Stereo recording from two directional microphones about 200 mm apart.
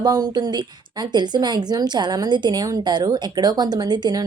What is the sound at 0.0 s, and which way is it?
A woman's voice, 20° right (ahead or behind).